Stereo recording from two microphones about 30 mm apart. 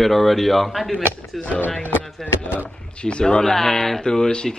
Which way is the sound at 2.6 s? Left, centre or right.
Left.